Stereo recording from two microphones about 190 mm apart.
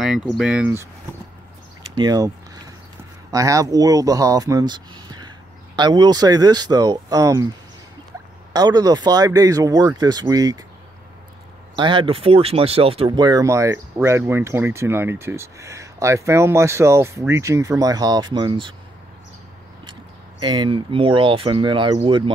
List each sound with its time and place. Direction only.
0.0 s speech: 5° right (ahead or behind)
2.0 s speech: 20° right (ahead or behind)
8.5 s speech: 20° right (ahead or behind)
11.7 s speech: 25° right (ahead or behind)
19.9 s speech: 25° right (ahead or behind)